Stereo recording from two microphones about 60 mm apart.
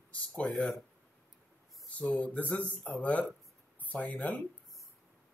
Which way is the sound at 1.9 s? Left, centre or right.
Left.